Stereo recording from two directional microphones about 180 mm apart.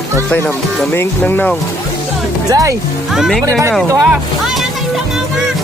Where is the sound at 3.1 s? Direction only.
Centre (ahead or behind).